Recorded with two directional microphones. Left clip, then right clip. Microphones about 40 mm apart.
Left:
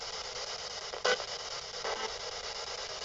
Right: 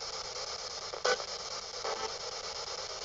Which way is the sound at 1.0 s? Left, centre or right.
Right.